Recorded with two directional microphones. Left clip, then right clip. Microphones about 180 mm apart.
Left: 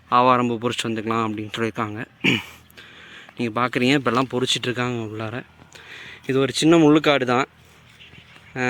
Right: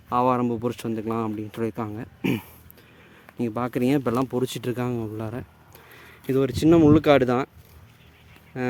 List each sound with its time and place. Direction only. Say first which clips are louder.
0.1 s speech: left 5 dB; 5° right (ahead or behind)
8.5 s speech: left 5 dB; 5° right (ahead or behind)